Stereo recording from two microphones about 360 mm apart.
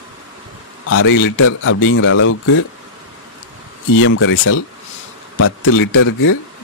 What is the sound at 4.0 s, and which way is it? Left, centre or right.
A man's voice, left.